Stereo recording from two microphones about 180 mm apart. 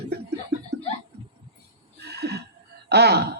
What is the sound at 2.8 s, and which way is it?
Speech, 65° right (ahead or behind).